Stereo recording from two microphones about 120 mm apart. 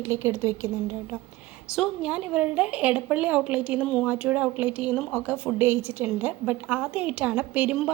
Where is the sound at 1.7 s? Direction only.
5° right (ahead or behind).